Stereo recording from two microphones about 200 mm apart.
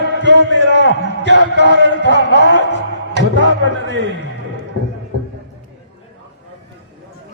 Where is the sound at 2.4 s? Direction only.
60° right (ahead or behind).